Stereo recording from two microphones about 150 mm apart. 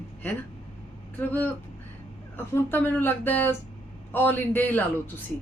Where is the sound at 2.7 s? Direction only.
15° left (ahead or behind).